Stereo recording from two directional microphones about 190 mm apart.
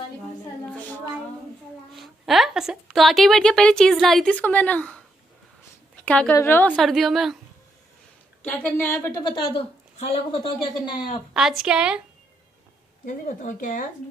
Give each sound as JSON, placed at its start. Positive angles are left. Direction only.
{"t": 2.0, "sound": "a woman's voice", "side_deg": 0}
{"t": 6.0, "sound": "a woman's voice", "side_deg": 5}
{"t": 8.5, "sound": "a woman's voice", "side_deg": 10}
{"t": 11.3, "sound": "a woman's voice", "side_deg": -5}
{"t": 13.0, "sound": "speech", "side_deg": 45}